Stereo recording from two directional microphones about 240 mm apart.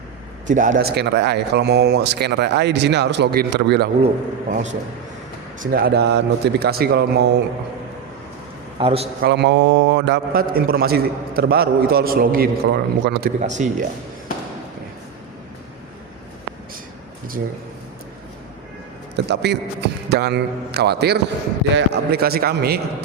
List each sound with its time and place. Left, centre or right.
0.4 s speech: right
4.0 s a man's voice: right
8.8 s speech: right
9.2 s a man's voice: right
13.5 s speech: right
19.1 s a man's voice: right